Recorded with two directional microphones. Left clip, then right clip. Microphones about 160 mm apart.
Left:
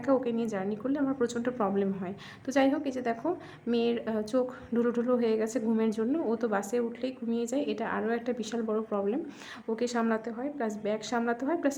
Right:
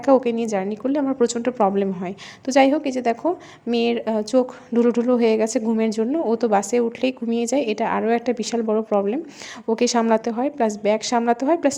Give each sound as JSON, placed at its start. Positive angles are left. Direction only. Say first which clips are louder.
{"t": 0.0, "sound": "a woman's voice", "louder": "right 11 dB", "side_deg": -35}